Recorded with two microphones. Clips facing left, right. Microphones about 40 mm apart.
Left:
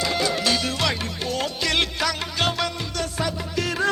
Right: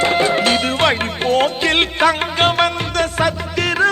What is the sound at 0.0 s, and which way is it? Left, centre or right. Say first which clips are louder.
Music: right 8 dB; right.